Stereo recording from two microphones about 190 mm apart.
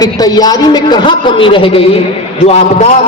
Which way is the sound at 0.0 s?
20° left (ahead or behind).